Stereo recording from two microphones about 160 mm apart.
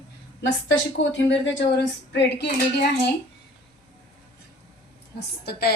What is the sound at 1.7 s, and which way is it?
Dishes, 90° left.